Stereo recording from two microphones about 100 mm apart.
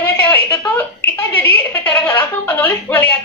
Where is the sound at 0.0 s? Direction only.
25° left (ahead or behind).